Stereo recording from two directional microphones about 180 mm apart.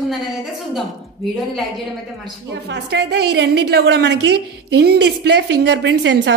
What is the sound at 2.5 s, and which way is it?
A woman's voice, 70° right (ahead or behind).